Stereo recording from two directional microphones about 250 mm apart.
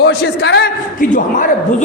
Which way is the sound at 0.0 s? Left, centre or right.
Left.